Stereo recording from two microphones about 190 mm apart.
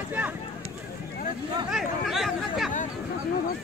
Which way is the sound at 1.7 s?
Centre (ahead or behind).